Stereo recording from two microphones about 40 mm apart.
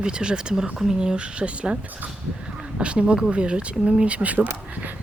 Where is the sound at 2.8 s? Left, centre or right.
Right.